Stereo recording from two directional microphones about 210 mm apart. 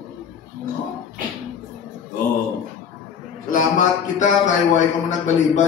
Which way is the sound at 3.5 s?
35° left (ahead or behind).